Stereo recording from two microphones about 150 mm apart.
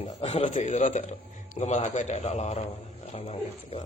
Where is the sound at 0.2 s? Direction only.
45° left (ahead or behind).